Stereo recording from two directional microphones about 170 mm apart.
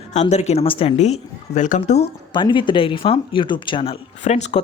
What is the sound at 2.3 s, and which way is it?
Speech, 30° left (ahead or behind).